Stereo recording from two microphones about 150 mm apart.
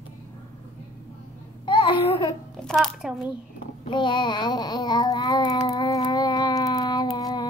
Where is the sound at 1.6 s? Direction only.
35° left (ahead or behind).